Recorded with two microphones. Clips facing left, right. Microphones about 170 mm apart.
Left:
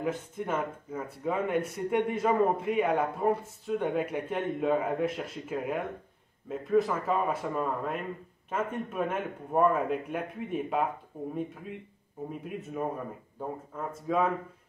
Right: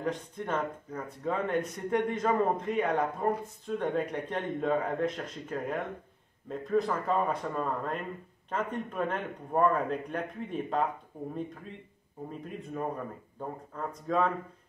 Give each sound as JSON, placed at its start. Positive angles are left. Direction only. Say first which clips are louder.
{"t": 0.0, "sound": "a man's voice", "louder": "left 1 dB", "side_deg": 5}
{"t": 12.3, "sound": "a man's voice", "louder": "left 1 dB", "side_deg": 5}